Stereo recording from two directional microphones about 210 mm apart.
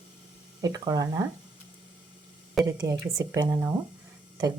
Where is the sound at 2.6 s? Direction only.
15° right (ahead or behind).